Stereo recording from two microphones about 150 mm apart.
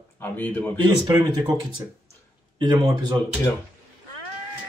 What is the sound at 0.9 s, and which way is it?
Speech, 25° right (ahead or behind).